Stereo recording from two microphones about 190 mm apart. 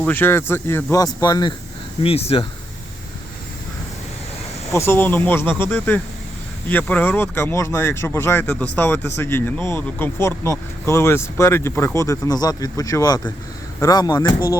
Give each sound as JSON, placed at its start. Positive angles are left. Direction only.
{"t": 0.0, "sound": "speech", "side_deg": 10}
{"t": 2.0, "sound": "speech", "side_deg": 30}
{"t": 4.7, "sound": "speech", "side_deg": 15}